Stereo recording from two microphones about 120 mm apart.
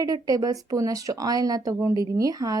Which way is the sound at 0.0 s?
30° right (ahead or behind).